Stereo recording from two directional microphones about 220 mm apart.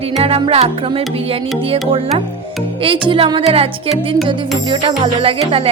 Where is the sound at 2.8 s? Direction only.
25° right (ahead or behind).